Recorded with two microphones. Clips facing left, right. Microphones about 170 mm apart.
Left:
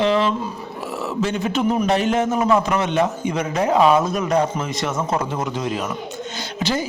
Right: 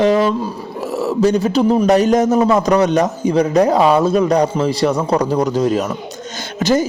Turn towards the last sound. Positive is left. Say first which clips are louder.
# right 7 dB
turn(degrees=-45)  # may be behind; listen again after turning